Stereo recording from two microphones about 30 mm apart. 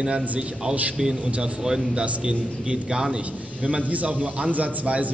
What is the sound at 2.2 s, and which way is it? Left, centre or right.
Speech, right.